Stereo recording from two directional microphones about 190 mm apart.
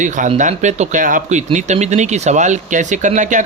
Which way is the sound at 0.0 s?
40° right (ahead or behind).